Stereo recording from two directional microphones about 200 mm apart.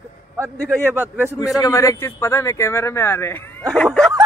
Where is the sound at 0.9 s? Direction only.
10° right (ahead or behind).